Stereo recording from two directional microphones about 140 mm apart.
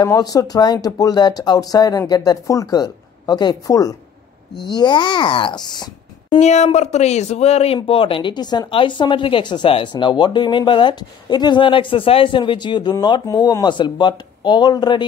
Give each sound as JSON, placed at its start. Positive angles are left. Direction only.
{"t": 0.0, "sound": "speech", "side_deg": 25}
{"t": 6.4, "sound": "speech", "side_deg": 55}